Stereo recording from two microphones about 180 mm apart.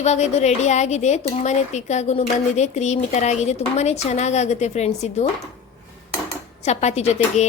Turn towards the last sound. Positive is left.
turn(degrees=40)  # may be behind; listen again after turning